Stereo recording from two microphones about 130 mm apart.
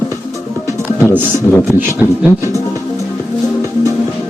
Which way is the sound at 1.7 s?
15° right (ahead or behind).